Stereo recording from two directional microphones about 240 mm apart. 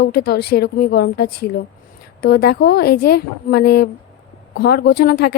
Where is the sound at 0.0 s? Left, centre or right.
Left.